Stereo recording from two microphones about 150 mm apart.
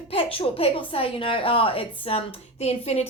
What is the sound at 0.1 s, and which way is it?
A woman's voice, 40° left (ahead or behind).